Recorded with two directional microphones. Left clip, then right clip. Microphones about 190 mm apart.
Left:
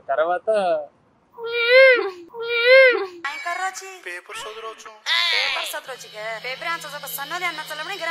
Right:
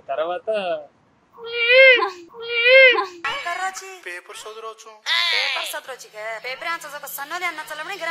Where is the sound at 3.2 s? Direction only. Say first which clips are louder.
Right 1 dB; centre (ahead or behind).